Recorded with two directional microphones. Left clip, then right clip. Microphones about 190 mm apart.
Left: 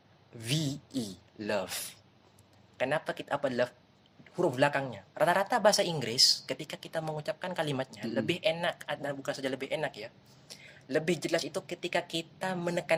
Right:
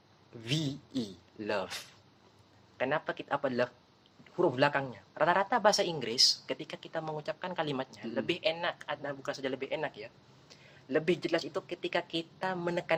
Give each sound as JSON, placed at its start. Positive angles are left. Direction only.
{"t": 0.3, "sound": "speech", "side_deg": 20}